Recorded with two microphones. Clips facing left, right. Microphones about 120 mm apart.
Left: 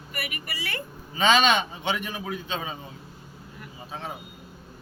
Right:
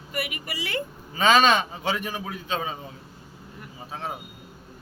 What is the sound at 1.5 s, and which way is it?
A man's voice, 35° right (ahead or behind).